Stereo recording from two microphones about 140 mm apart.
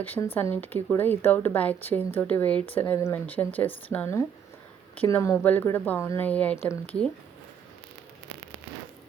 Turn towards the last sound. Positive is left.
turn(degrees=10)  # may be behind; listen again after turning